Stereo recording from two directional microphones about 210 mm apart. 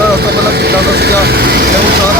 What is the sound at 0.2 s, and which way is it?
Vehicle, 50° right (ahead or behind).